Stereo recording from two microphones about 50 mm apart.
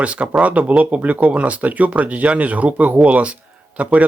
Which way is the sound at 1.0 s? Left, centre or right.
Right.